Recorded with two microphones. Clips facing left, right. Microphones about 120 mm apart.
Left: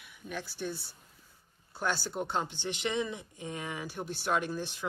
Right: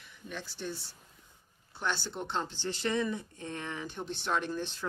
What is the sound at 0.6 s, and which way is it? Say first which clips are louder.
Speech: left 2 dB; 10° left (ahead or behind).